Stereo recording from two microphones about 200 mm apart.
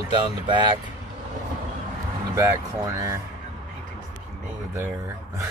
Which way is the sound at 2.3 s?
15° right (ahead or behind).